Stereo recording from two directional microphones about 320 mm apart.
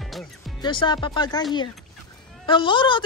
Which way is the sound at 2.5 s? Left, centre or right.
Centre.